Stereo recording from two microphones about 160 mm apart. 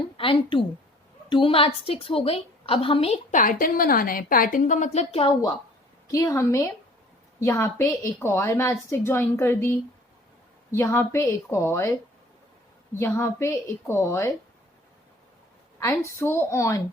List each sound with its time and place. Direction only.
0.2 s a woman's voice: 35° left (ahead or behind)
3.3 s a woman's voice: 55° left (ahead or behind); by 5.3 s 40° left (ahead or behind)
6.1 s a woman's voice: 20° left (ahead or behind)
13.0 s a woman's voice: 15° left (ahead or behind)
16.2 s a woman's voice: 15° left (ahead or behind)